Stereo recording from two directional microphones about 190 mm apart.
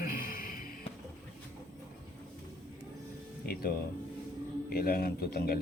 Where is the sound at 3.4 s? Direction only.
55° left (ahead or behind).